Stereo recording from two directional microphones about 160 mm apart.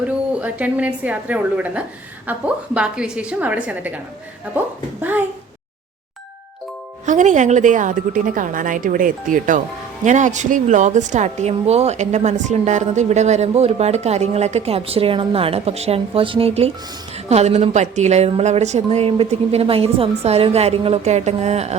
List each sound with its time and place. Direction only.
0.3 s a woman's voice: 10° right (ahead or behind)
7.0 s a woman's voice: 50° right (ahead or behind)